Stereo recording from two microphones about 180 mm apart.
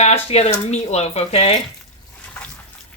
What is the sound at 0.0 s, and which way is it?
Speech, 35° left (ahead or behind).